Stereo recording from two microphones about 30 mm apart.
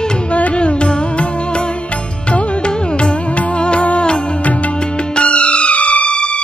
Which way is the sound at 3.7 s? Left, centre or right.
Left.